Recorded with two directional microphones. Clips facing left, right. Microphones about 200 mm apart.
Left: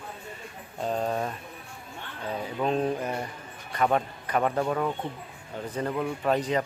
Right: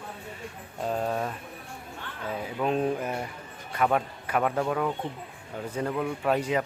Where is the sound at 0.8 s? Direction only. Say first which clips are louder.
Even; 5° right (ahead or behind).